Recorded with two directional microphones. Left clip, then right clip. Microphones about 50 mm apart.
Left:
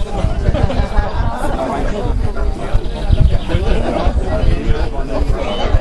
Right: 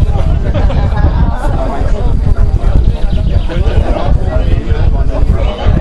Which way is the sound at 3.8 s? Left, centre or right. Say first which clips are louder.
Right 2 dB; right.